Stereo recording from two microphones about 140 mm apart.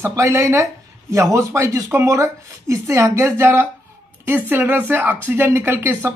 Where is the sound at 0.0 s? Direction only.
20° right (ahead or behind).